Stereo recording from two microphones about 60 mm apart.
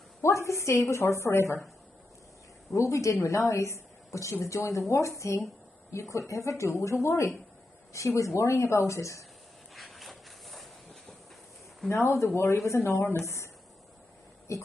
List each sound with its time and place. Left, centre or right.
0.2 s a woman's voice: left
2.7 s a woman's voice: left
9.8 s a sound: centre
11.9 s a woman's voice: left
14.5 s a woman's voice: left